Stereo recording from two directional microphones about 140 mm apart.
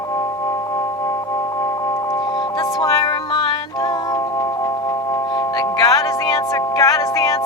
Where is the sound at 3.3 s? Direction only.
30° left (ahead or behind).